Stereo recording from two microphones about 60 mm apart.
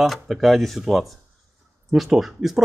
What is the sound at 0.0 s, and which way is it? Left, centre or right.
Speech, centre.